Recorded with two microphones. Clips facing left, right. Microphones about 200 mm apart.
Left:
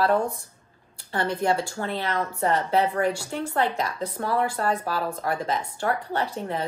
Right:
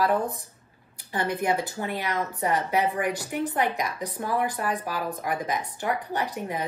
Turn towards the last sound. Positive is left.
turn(degrees=-15)  # may be behind; listen again after turning